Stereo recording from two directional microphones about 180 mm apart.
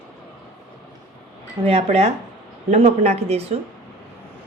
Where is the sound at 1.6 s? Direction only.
35° right (ahead or behind).